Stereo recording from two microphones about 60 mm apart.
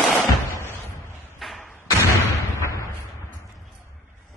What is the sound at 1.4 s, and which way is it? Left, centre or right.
Thump, centre.